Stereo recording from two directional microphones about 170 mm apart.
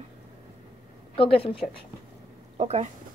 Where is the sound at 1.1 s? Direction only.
30° left (ahead or behind).